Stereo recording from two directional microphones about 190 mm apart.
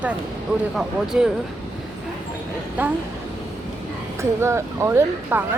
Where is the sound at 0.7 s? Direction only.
5° right (ahead or behind).